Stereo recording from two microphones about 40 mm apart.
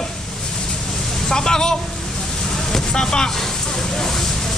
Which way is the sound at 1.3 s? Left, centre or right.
Centre.